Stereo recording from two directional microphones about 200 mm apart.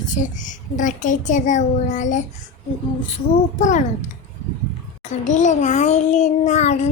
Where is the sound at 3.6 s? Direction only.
40° left (ahead or behind).